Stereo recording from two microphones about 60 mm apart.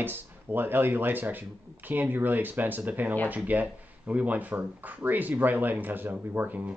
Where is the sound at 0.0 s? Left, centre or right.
Right.